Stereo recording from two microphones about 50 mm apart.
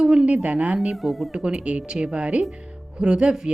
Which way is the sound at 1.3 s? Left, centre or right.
Centre.